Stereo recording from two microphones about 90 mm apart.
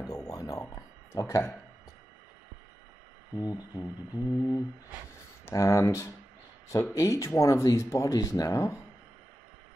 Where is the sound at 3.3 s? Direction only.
45° left (ahead or behind).